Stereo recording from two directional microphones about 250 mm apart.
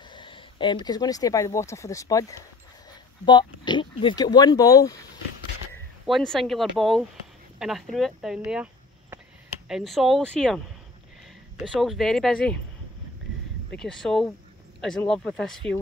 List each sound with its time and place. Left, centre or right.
0.1 s speech: centre
6.0 s speech: centre
9.7 s speech: centre
11.6 s speech: centre
13.7 s speech: centre